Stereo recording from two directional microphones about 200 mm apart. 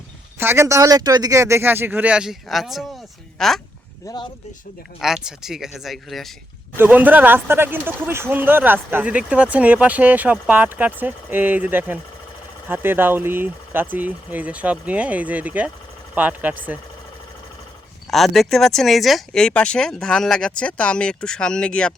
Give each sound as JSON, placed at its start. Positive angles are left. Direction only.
{"t": 0.3, "sound": "speech", "side_deg": -10}
{"t": 4.0, "sound": "speech", "side_deg": 20}
{"t": 4.9, "sound": "speech", "side_deg": 0}
{"t": 18.1, "sound": "speech", "side_deg": 0}